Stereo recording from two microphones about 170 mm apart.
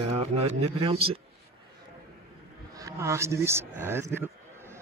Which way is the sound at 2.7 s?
20° right (ahead or behind).